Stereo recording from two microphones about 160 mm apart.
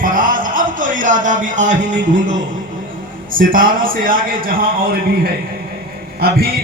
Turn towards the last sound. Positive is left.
turn(degrees=-70)  # may be behind; listen again after turning